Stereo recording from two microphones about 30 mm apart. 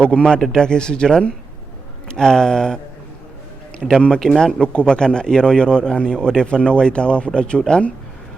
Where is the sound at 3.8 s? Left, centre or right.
Centre.